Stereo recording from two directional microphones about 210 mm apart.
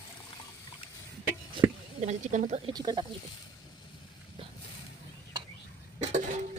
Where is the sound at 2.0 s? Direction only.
35° right (ahead or behind).